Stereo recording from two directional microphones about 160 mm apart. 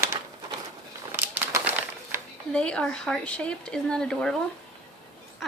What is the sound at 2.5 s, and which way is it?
Speech, 5° left (ahead or behind).